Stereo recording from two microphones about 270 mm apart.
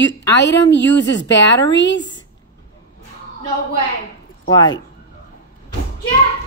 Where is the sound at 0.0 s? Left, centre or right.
Left.